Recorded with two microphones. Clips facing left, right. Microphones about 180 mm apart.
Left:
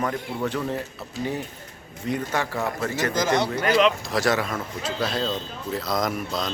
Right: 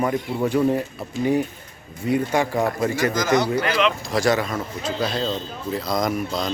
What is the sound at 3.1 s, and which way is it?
Speech, 30° left (ahead or behind).